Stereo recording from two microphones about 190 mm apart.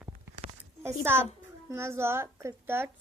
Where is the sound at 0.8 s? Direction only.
10° right (ahead or behind).